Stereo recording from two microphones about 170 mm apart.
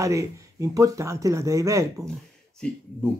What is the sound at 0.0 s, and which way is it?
Speech, 20° right (ahead or behind).